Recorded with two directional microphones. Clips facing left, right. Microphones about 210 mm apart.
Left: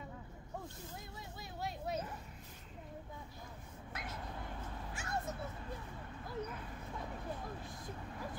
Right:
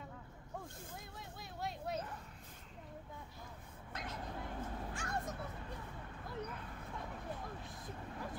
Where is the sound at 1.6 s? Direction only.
5° left (ahead or behind).